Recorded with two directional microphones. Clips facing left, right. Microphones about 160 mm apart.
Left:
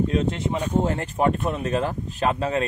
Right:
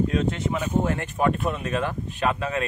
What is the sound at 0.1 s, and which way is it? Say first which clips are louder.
Speech: left 1 dB; 30° left (ahead or behind).